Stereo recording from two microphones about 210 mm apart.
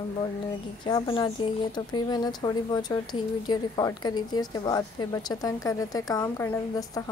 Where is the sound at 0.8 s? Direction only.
20° left (ahead or behind).